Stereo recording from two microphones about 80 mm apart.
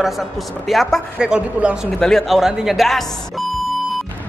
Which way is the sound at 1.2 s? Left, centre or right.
Centre.